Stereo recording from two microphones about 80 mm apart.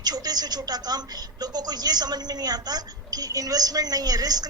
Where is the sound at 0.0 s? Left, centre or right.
Right.